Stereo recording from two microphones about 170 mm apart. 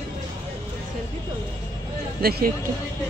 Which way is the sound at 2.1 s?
65° right (ahead or behind).